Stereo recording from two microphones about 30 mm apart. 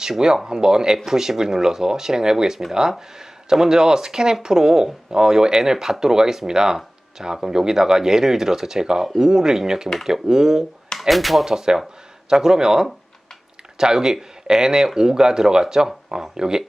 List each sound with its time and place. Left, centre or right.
0.0 s speech: right
11.1 s speech: centre
11.4 s speech: centre